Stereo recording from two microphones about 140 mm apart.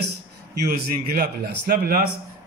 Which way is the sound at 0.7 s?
90° right.